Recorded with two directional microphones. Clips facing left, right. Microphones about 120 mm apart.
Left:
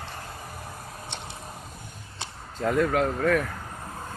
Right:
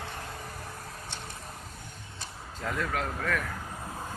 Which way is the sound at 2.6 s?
30° left (ahead or behind).